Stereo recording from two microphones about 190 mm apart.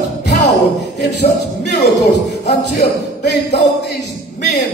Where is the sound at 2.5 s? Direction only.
65° left (ahead or behind).